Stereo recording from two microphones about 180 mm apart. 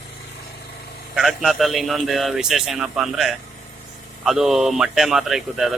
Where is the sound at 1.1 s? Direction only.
Centre (ahead or behind).